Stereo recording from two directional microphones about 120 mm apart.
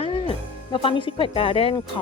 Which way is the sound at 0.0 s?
50° left (ahead or behind).